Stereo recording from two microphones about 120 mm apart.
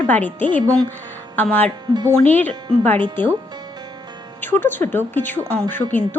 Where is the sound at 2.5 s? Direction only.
40° right (ahead or behind).